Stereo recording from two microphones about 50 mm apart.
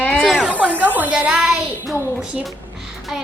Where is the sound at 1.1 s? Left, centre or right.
Centre.